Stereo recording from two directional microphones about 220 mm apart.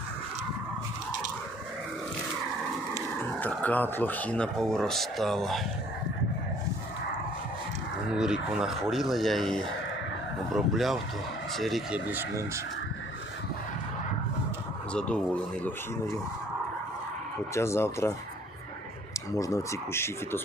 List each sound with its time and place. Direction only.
3.4 s speech: 5° left (ahead or behind)
8.1 s speech: 5° right (ahead or behind)
14.9 s speech: 5° left (ahead or behind)
17.5 s speech: 10° left (ahead or behind)
19.3 s speech: 15° left (ahead or behind)